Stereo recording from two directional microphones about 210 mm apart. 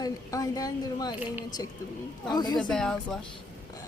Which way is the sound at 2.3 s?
20° left (ahead or behind).